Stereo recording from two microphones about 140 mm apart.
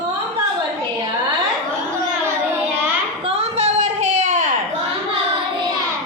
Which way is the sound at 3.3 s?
50° right (ahead or behind).